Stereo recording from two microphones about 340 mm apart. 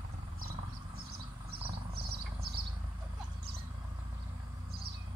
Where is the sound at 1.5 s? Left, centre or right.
Right.